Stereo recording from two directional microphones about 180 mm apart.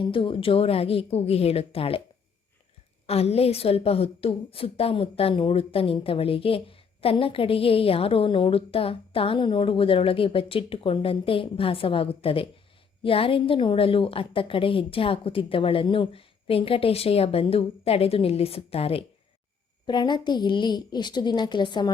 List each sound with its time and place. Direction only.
0.0 s a woman's voice: 30° left (ahead or behind)
3.1 s a woman's voice: 35° left (ahead or behind)